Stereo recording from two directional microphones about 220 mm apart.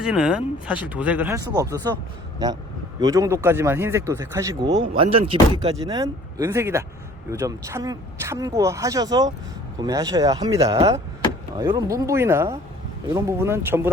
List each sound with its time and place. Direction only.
0.0 s speech: 5° right (ahead or behind)
3.0 s speech: 15° right (ahead or behind)